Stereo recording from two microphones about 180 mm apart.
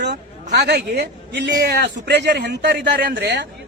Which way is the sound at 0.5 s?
65° right (ahead or behind).